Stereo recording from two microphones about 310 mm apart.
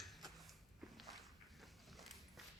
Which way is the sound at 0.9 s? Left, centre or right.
Centre.